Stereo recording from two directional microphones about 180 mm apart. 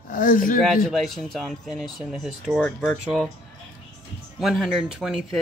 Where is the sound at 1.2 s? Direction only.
Centre (ahead or behind).